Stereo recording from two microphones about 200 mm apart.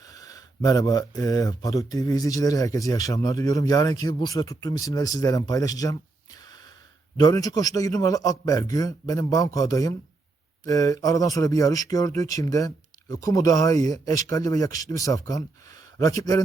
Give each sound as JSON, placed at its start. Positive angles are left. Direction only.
{"t": 0.0, "sound": "speech", "side_deg": 15}